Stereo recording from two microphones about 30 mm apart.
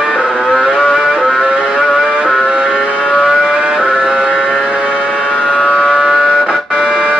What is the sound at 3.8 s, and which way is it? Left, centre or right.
Music, centre.